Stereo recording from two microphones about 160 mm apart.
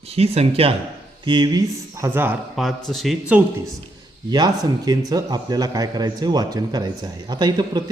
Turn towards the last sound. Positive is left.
turn(degrees=-25)  # may be behind; listen again after turning